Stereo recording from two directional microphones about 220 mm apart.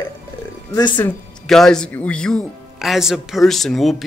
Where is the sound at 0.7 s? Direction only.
15° left (ahead or behind).